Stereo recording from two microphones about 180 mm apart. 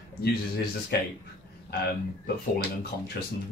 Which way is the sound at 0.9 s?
65° left (ahead or behind).